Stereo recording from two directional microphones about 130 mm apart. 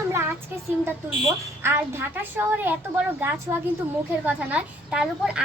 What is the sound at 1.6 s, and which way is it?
A woman's voice, 15° right (ahead or behind).